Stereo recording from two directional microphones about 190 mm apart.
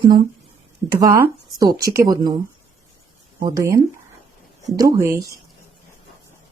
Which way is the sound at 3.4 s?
15° right (ahead or behind).